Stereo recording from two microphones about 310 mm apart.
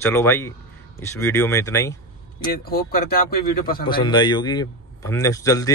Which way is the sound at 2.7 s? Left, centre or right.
Left.